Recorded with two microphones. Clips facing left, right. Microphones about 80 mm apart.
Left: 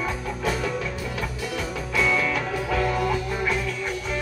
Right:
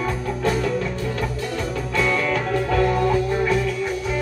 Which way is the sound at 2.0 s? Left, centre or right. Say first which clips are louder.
Right 2 dB; centre.